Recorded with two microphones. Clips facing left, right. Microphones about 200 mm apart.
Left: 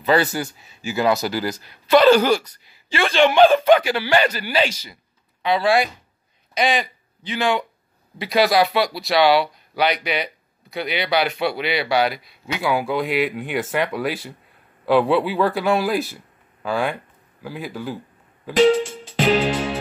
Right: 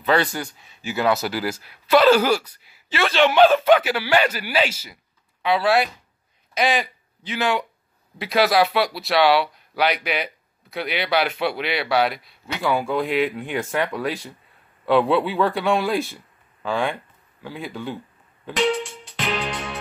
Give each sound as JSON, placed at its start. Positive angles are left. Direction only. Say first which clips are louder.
{"t": 0.0, "sound": "speech", "louder": "left 2 dB", "side_deg": 5}
{"t": 19.1, "sound": "music", "louder": "left 9 dB", "side_deg": 35}